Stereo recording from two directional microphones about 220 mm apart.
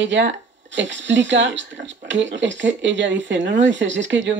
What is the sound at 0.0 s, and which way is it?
Speech, 55° right (ahead or behind).